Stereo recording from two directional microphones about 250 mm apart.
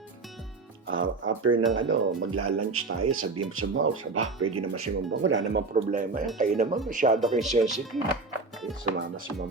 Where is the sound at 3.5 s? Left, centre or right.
Right.